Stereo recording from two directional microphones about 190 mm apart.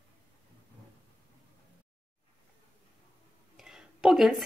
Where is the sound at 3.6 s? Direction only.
Centre (ahead or behind).